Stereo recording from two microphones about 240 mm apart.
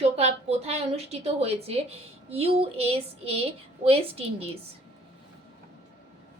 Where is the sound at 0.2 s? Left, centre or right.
Right.